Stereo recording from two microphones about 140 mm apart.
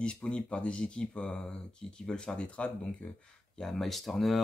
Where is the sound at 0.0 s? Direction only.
5° left (ahead or behind).